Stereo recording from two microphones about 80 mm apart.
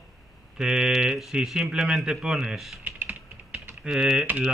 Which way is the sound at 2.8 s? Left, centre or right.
Right.